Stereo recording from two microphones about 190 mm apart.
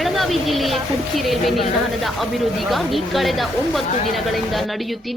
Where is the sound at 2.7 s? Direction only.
Centre (ahead or behind).